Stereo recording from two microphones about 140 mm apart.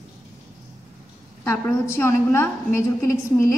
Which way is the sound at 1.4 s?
20° left (ahead or behind).